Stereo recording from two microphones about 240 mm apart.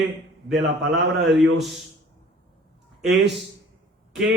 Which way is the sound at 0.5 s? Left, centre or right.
Right.